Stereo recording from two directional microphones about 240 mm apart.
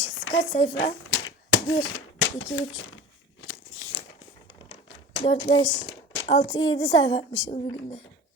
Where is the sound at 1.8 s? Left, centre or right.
Left.